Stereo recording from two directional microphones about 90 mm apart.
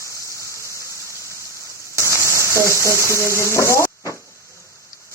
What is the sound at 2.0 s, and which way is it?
Speech, 30° left (ahead or behind).